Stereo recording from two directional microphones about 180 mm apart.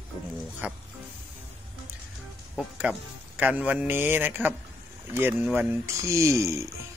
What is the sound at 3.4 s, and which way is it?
Speech, 10° right (ahead or behind).